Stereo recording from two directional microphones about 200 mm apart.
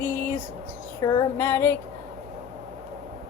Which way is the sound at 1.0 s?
10° left (ahead or behind).